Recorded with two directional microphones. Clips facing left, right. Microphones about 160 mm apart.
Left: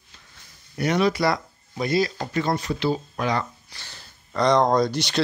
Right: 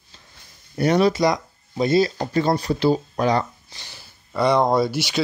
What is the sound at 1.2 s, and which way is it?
Speech, 20° right (ahead or behind).